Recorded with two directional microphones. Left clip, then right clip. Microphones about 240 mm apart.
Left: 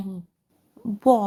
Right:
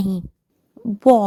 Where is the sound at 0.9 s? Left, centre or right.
Right.